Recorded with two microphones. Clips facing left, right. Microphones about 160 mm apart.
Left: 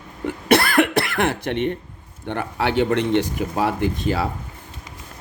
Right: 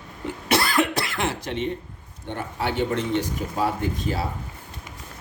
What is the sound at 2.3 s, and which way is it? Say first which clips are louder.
Speech: left 5 dB; 80° left.